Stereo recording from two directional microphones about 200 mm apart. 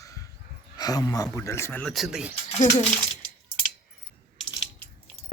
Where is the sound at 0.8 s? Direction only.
20° left (ahead or behind); by 2.3 s 5° right (ahead or behind).